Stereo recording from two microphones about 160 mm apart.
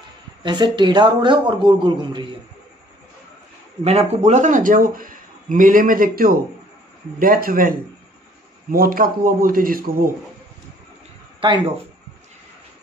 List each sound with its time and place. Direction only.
0.4 s a man's voice: 30° right (ahead or behind)
3.8 s a man's voice: 40° right (ahead or behind); by 7.7 s 60° right (ahead or behind)
8.7 s a man's voice: 60° right (ahead or behind)
11.4 s speech: 30° right (ahead or behind)